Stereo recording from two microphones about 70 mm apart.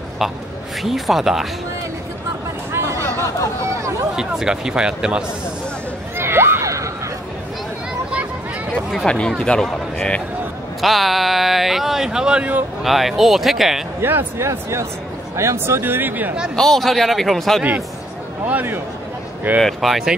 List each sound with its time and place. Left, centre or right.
0.8 s speech: centre
4.2 s speech: centre
6.1 s a sound: right
8.9 s a man's voice: centre
10.8 s speech: centre
14.0 s speech: right
16.5 s speech: centre
18.4 s a man's voice: right
19.6 s speech: centre